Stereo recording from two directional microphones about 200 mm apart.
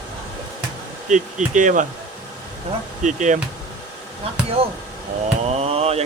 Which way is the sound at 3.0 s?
40° right (ahead or behind).